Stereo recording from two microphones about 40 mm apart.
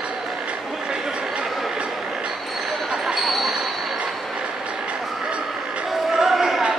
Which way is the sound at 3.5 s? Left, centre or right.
Centre.